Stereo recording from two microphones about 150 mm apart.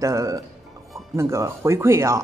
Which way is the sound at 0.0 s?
20° right (ahead or behind).